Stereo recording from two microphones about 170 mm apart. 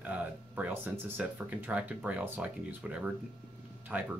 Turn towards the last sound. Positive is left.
turn(degrees=-10)  # may be behind; listen again after turning